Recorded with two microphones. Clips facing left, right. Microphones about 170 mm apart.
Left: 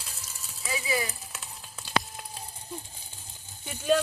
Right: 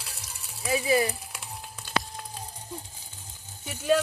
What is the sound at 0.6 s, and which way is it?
Speech, 60° right (ahead or behind).